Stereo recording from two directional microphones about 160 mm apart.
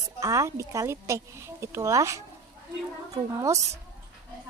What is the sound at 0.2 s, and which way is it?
Speech, 20° right (ahead or behind).